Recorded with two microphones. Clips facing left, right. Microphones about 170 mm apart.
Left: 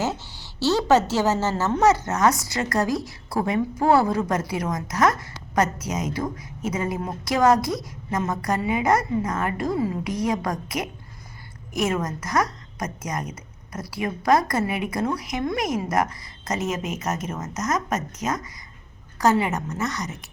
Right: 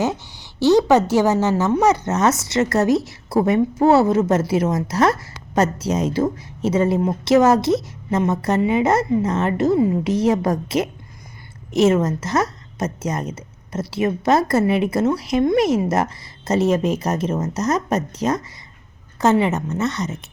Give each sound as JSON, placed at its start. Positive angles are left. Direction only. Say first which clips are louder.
{"t": 0.0, "sound": "a woman's voice", "louder": "right 5 dB", "side_deg": -15}